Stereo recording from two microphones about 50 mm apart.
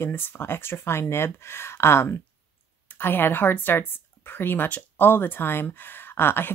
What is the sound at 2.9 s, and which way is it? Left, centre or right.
A woman's voice, left.